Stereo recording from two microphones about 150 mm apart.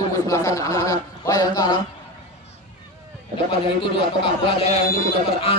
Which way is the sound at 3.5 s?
35° left (ahead or behind).